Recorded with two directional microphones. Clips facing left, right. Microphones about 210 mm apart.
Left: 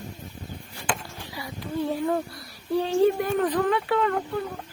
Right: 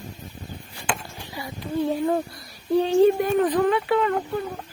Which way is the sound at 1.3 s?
25° right (ahead or behind).